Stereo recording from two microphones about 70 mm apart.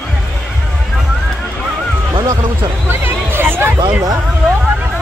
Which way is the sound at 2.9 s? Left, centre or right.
Right.